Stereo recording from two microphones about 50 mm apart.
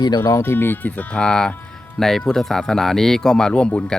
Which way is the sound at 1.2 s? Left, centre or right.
Centre.